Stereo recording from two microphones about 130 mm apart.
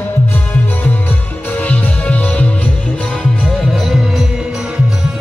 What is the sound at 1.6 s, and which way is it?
Music, 10° left (ahead or behind).